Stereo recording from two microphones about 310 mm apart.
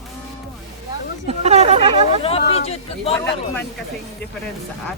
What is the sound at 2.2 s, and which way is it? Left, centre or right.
Speech, centre.